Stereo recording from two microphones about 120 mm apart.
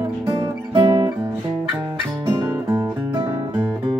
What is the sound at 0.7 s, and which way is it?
Music, 45° right (ahead or behind).